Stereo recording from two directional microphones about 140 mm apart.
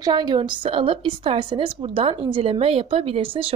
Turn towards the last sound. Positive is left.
turn(degrees=-40)  # may be behind; listen again after turning